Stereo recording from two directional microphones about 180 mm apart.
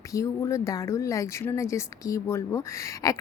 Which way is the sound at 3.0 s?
20° left (ahead or behind).